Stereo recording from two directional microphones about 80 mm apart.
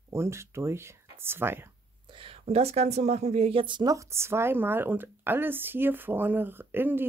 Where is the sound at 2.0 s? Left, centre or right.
Right.